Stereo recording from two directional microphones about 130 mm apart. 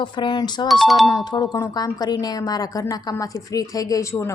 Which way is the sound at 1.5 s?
30° left (ahead or behind).